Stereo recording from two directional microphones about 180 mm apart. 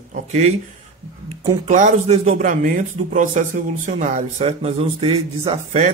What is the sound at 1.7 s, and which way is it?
Speech, 45° right (ahead or behind).